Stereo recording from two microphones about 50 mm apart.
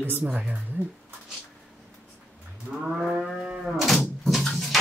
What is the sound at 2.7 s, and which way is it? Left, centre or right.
Livestock, right.